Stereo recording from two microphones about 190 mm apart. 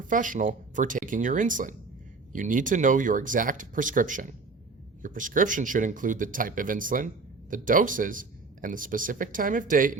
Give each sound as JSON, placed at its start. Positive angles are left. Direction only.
{"t": 0.0, "sound": "speech", "side_deg": -45}